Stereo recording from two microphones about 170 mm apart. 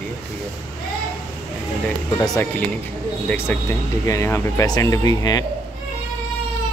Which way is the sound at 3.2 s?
15° left (ahead or behind).